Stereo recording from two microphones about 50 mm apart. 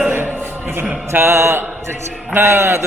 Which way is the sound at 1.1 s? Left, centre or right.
Right.